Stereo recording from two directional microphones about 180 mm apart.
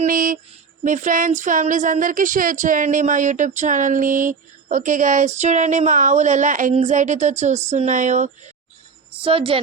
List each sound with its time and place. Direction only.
0.0 s speech: 50° right (ahead or behind)
9.2 s a woman's voice: 30° right (ahead or behind)